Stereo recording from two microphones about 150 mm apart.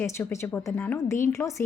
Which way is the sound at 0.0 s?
15° left (ahead or behind).